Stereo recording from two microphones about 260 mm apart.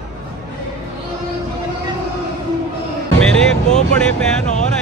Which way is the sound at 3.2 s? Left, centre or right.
Centre.